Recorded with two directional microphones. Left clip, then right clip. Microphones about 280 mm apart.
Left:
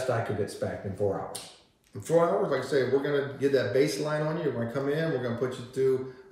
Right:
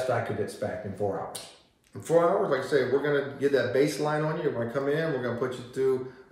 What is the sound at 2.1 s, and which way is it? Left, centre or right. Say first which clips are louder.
Speech: right 1 dB; centre.